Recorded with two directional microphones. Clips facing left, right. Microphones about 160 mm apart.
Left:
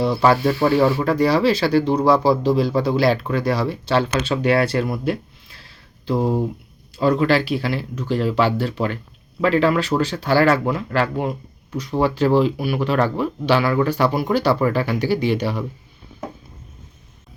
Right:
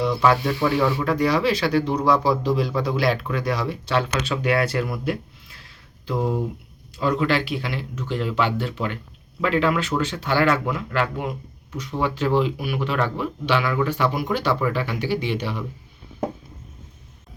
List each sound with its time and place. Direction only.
0.0 s speech: 35° left (ahead or behind)